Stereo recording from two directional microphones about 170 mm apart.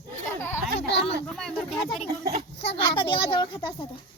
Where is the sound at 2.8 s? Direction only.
30° left (ahead or behind).